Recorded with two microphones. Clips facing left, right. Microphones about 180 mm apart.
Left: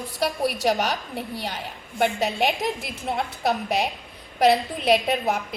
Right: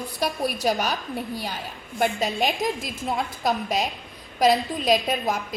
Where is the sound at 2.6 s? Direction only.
65° left (ahead or behind).